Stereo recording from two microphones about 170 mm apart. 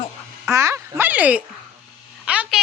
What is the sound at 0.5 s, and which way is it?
Speech, 15° right (ahead or behind).